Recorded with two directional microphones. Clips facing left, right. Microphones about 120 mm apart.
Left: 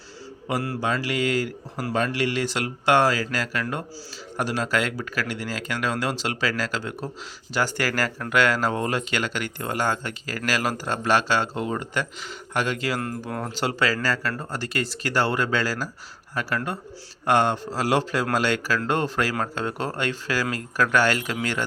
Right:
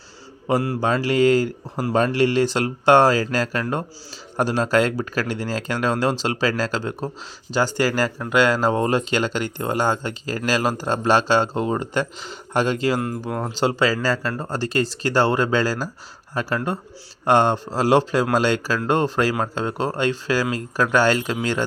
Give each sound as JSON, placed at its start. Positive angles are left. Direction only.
{"t": 0.4, "sound": "speech", "side_deg": -25}